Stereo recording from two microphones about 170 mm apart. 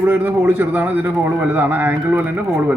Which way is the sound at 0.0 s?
10° right (ahead or behind).